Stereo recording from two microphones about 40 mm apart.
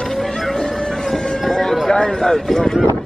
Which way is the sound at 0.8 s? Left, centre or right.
Centre.